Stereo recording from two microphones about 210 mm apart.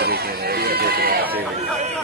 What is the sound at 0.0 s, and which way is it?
Run, 50° right (ahead or behind).